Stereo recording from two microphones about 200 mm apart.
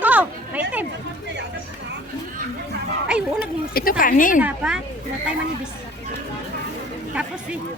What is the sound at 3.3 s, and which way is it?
Speech, 50° left (ahead or behind).